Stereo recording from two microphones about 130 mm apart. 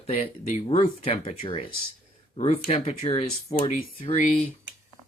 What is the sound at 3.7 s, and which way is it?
Speech, 90° left.